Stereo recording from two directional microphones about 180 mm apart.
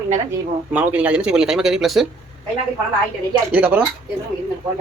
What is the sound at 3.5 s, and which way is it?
Speech, 10° right (ahead or behind).